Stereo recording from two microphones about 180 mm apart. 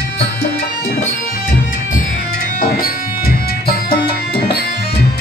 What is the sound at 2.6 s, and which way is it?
Music, 55° left (ahead or behind).